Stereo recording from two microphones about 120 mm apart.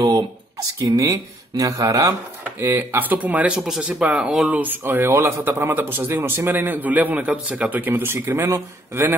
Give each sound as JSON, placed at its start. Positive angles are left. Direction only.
{"t": 0.9, "sound": "speech", "side_deg": -30}